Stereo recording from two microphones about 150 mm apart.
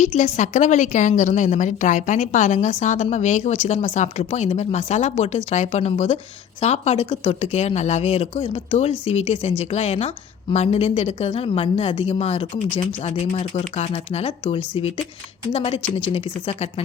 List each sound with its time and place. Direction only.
0.0 s a woman's voice: 50° left (ahead or behind)